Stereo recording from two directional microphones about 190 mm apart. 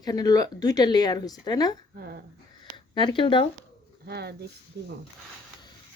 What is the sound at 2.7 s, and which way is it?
Speech, 25° left (ahead or behind).